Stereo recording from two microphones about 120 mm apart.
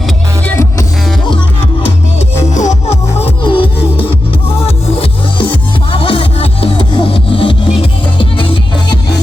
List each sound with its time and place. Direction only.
0.4 s music: 20° left (ahead or behind)
2.6 s music: 75° left (ahead or behind)
3.4 s music: 45° left (ahead or behind)